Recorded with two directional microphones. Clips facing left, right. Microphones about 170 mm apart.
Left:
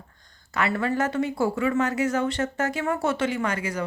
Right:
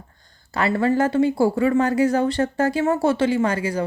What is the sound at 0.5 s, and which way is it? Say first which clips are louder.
Speech: right 5 dB; 30° right (ahead or behind).